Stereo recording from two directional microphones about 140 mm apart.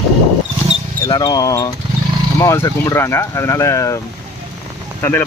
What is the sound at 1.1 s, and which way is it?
Speech, 30° left (ahead or behind).